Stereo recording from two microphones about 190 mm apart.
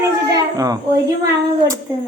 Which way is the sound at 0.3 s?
20° right (ahead or behind).